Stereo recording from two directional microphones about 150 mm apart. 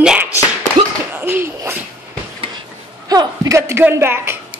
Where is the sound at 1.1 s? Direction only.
15° right (ahead or behind).